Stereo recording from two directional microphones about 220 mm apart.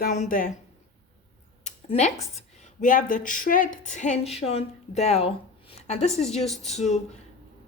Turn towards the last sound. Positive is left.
turn(degrees=30)  # may be behind; listen again after turning